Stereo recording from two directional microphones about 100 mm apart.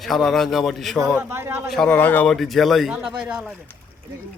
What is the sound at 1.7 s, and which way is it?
Speech, 5° left (ahead or behind).